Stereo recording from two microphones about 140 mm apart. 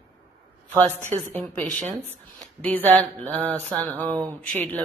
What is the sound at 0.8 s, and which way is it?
Speech, 60° right (ahead or behind).